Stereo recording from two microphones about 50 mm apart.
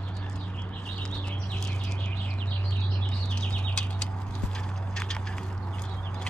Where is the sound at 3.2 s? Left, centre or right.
Centre.